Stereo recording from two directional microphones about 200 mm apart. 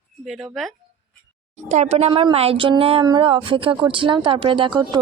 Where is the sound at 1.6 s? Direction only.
35° right (ahead or behind).